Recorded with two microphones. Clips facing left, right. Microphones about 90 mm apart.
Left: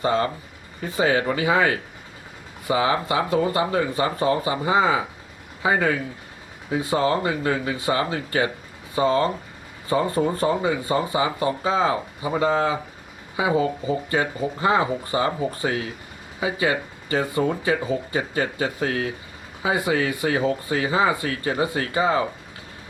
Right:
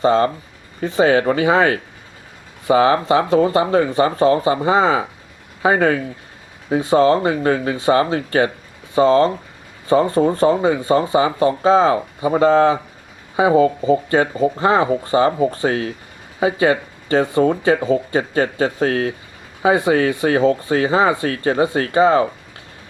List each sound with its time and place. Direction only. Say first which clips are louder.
0.0 s speech: right 7 dB; 30° right (ahead or behind)